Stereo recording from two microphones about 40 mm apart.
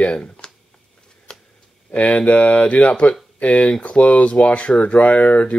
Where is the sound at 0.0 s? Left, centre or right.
Left.